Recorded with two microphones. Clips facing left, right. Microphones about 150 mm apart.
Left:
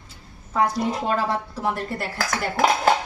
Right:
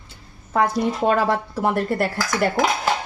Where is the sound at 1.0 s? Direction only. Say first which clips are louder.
Right 5 dB; 60° right (ahead or behind).